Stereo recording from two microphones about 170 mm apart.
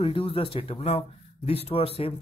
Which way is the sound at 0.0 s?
30° left (ahead or behind).